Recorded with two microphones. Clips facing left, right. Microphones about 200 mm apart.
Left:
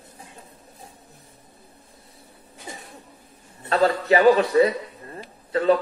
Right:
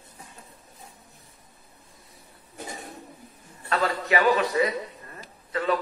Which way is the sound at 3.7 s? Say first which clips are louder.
Left 6 dB; 30° left (ahead or behind).